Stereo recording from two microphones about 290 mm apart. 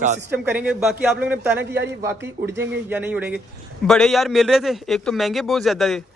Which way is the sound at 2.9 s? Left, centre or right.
Centre.